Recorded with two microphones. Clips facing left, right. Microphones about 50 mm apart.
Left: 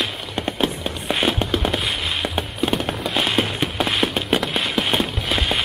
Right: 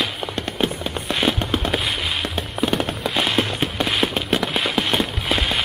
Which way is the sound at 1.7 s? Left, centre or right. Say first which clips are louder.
Even; centre.